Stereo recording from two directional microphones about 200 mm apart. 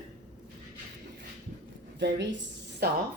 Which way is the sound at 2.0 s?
60° right (ahead or behind).